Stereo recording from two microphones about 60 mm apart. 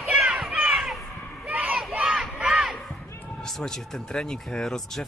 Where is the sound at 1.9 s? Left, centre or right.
Centre.